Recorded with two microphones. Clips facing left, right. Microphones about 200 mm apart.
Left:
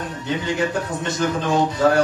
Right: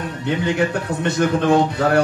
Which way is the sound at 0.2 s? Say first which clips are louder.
Right 3 dB; 60° right (ahead or behind).